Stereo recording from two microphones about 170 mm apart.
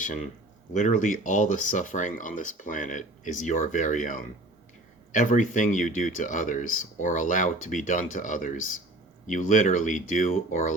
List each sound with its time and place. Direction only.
0.7 s speech: 45° left (ahead or behind)